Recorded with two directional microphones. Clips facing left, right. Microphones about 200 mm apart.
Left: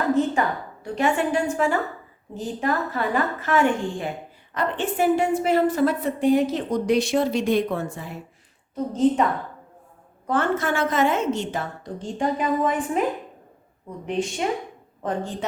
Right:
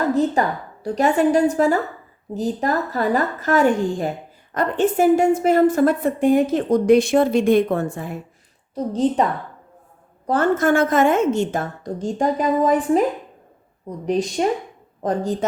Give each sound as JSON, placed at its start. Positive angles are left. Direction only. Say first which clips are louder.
{"t": 0.1, "sound": "a woman's voice", "louder": "right 2 dB", "side_deg": -35}
{"t": 8.7, "sound": "a woman's voice", "louder": "right 1 dB", "side_deg": -35}
{"t": 10.2, "sound": "a woman's voice", "louder": "right 5 dB", "side_deg": -40}
{"t": 14.0, "sound": "a woman's voice", "louder": "right 5 dB", "side_deg": -40}